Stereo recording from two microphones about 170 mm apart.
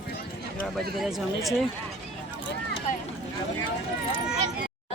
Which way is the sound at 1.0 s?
Centre (ahead or behind).